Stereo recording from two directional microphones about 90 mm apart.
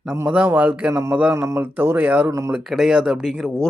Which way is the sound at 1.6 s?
20° right (ahead or behind).